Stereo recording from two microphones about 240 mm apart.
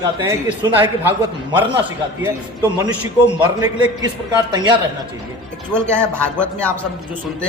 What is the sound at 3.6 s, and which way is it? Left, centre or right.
Speech, centre.